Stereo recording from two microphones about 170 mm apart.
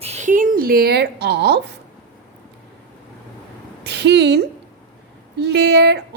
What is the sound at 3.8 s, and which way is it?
A woman's voice, 85° right.